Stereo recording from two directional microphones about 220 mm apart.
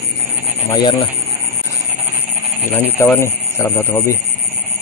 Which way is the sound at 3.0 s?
10° left (ahead or behind).